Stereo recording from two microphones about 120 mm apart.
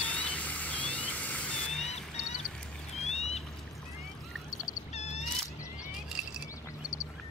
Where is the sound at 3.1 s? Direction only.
65° left (ahead or behind).